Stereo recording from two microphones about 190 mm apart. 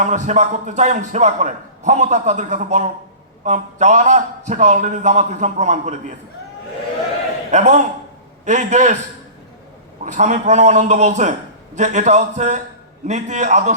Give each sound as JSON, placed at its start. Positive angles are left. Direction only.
{"t": 0.0, "sound": "a man's voice", "side_deg": -40}
{"t": 7.5, "sound": "a man's voice", "side_deg": -40}
{"t": 10.0, "sound": "a man's voice", "side_deg": -40}